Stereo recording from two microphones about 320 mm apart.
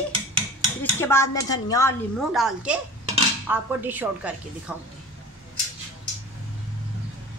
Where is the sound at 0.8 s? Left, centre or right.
Centre.